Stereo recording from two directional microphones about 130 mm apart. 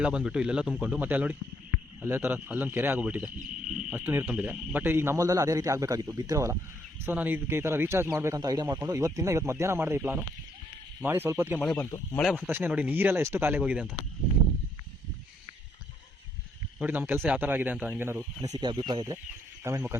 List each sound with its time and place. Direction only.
0.0 s speech: 5° right (ahead or behind)
11.6 s speech: 5° left (ahead or behind)
12.5 s speech: 15° right (ahead or behind)
16.8 s speech: 15° right (ahead or behind)
18.5 s speech: 35° right (ahead or behind)
19.6 s speech: 20° right (ahead or behind)